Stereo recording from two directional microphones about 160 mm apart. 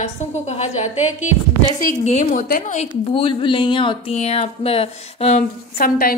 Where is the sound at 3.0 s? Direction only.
35° left (ahead or behind).